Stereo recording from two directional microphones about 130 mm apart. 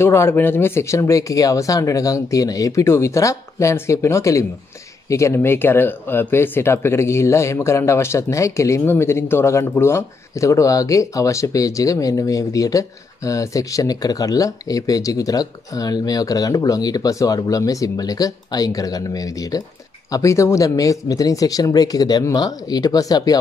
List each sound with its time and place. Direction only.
0.0 s speech: 20° left (ahead or behind)